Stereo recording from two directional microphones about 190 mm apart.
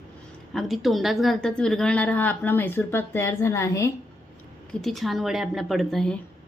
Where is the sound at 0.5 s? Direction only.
Centre (ahead or behind).